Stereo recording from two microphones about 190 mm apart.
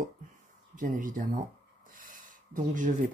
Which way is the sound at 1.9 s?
45° right (ahead or behind).